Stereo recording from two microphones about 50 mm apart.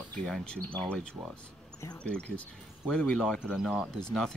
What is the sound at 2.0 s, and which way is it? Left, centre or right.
Speech, left.